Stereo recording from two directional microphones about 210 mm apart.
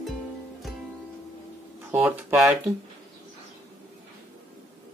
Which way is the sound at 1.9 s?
10° right (ahead or behind).